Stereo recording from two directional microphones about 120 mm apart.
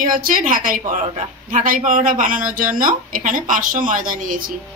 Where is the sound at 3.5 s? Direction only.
90° right.